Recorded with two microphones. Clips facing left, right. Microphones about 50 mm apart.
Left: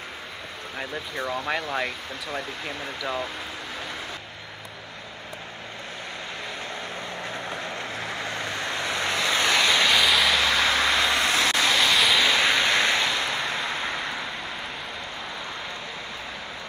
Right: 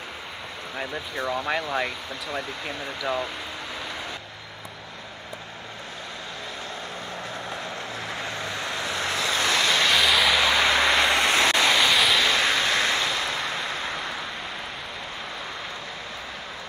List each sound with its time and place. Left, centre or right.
0.7 s speech: centre
7.6 s vehicle: left
9.7 s vehicle: centre
10.6 s vehicle: right
11.7 s vehicle: centre
12.4 s vehicle: left